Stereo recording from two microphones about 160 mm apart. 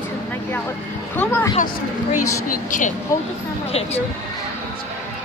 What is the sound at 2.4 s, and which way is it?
Speech, 55° left (ahead or behind).